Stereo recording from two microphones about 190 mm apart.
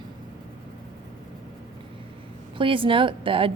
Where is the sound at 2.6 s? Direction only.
25° right (ahead or behind).